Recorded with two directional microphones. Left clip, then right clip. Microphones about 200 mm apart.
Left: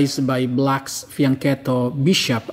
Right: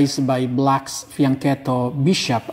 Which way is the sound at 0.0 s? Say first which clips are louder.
Right 1 dB; 10° left (ahead or behind).